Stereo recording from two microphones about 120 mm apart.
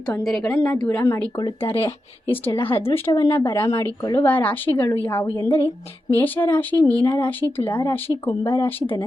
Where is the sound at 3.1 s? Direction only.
35° left (ahead or behind).